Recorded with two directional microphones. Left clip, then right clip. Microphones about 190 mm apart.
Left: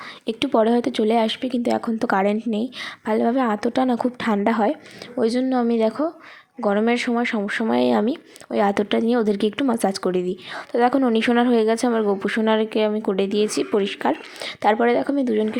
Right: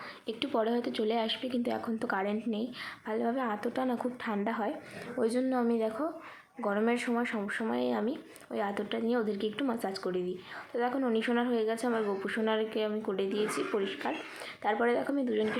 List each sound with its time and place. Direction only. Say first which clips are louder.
0.3 s speech: left 12 dB; 50° left (ahead or behind)
5.1 s a woman's voice: left 9 dB; 35° left (ahead or behind)